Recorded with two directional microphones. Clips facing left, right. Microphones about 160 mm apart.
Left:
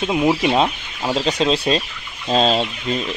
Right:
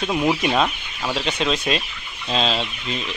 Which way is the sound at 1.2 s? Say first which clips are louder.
Left 5 dB; 35° left (ahead or behind).